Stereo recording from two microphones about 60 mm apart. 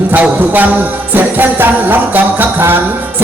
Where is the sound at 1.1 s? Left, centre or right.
Right.